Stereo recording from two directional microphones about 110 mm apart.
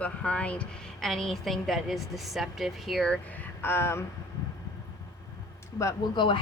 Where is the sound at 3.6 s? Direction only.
20° left (ahead or behind).